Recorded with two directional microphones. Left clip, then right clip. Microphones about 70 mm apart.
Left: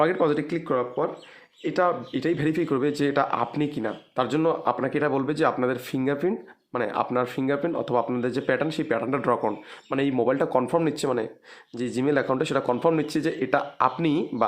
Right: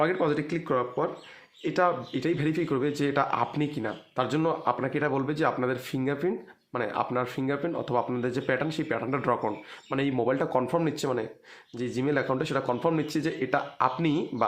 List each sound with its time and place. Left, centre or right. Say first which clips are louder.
0.0 s speech: left 4 dB; left
0.5 s speech: left 2 dB; centre